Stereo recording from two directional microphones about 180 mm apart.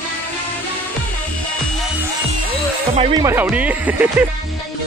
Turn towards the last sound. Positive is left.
turn(degrees=-10)  # may be behind; listen again after turning